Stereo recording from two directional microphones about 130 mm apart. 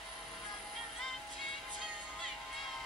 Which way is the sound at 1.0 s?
Centre (ahead or behind).